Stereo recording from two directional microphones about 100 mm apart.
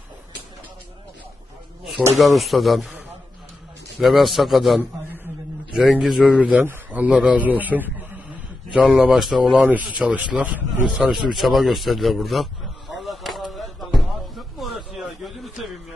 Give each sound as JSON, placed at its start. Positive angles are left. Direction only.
{"t": 2.1, "sound": "a man's voice", "side_deg": 0}
{"t": 4.0, "sound": "a man's voice", "side_deg": 0}
{"t": 6.3, "sound": "speech", "side_deg": -15}
{"t": 8.7, "sound": "speech", "side_deg": -5}
{"t": 10.9, "sound": "a sound", "side_deg": 0}